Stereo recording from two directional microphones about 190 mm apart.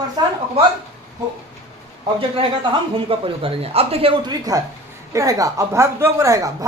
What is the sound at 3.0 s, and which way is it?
A woman's voice, 30° right (ahead or behind).